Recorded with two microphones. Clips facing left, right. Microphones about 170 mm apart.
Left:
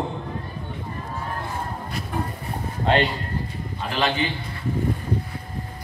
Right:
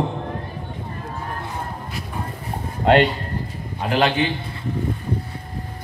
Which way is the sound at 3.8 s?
50° right (ahead or behind).